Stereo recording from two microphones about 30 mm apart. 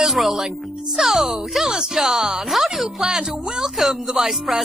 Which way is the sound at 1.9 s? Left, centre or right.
Centre.